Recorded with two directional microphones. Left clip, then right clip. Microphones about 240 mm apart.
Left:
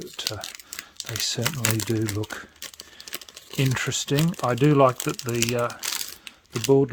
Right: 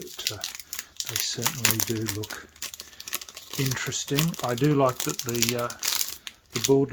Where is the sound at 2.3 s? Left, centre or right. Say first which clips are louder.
Left 3 dB; left.